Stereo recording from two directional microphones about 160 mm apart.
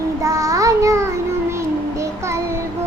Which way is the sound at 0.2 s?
20° right (ahead or behind).